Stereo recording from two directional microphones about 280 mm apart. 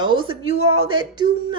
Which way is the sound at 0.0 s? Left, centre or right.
Centre.